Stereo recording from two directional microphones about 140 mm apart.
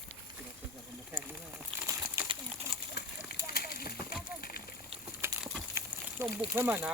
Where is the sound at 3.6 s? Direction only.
90° left.